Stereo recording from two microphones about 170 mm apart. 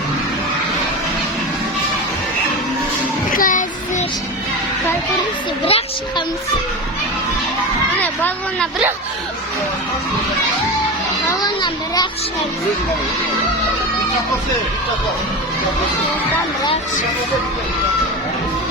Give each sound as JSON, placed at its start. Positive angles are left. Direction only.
{"t": 3.3, "sound": "child singing", "side_deg": 50}
{"t": 5.6, "sound": "a woman's voice", "side_deg": 35}
{"t": 8.0, "sound": "speech", "side_deg": 10}
{"t": 11.3, "sound": "a child's voice", "side_deg": 25}